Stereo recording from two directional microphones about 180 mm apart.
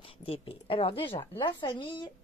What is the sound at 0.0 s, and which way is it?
A woman's voice, 30° left (ahead or behind).